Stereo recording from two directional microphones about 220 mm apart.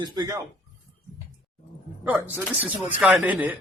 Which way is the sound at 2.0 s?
10° right (ahead or behind).